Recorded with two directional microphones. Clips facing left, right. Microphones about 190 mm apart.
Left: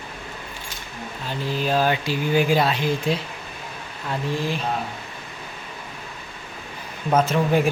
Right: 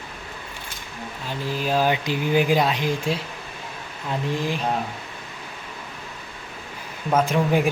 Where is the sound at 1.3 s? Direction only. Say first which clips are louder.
Left 1 dB; 10° right (ahead or behind).